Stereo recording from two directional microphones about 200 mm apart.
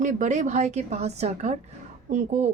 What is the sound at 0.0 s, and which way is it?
Speech, 40° right (ahead or behind).